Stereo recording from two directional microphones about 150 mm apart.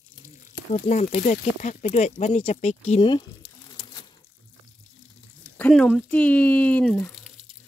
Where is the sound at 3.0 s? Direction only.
30° left (ahead or behind).